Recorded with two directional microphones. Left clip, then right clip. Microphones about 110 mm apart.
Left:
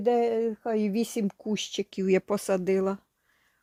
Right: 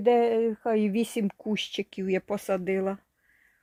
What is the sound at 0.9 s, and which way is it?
Speech, 5° right (ahead or behind).